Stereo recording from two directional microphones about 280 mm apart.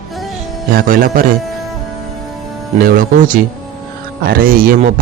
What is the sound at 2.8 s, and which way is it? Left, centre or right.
Speech, right.